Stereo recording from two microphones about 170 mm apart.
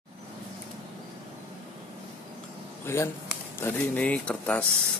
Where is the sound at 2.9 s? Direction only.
15° left (ahead or behind).